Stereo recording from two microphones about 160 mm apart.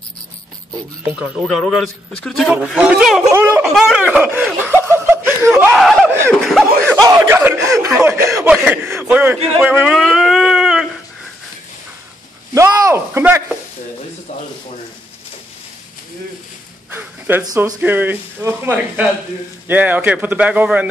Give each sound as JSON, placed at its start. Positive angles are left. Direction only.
{"t": 1.1, "sound": "a man's voice", "side_deg": -10}
{"t": 3.3, "sound": "a sound", "side_deg": -15}
{"t": 3.7, "sound": "speech", "side_deg": -5}
{"t": 4.8, "sound": "laughter", "side_deg": -15}
{"t": 5.6, "sound": "speech", "side_deg": -5}
{"t": 6.4, "sound": "snicker", "side_deg": 0}
{"t": 7.0, "sound": "a sound", "side_deg": -15}
{"t": 12.5, "sound": "a sound", "side_deg": -15}
{"t": 16.9, "sound": "speech", "side_deg": -10}
{"t": 17.5, "sound": "speech", "side_deg": -25}
{"t": 17.7, "sound": "speech", "side_deg": -10}